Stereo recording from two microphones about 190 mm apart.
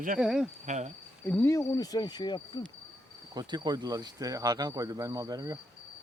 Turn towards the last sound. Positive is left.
turn(degrees=-20)  # may be behind; listen again after turning